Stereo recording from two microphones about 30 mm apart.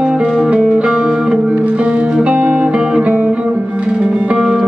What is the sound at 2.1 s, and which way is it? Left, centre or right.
Music, right.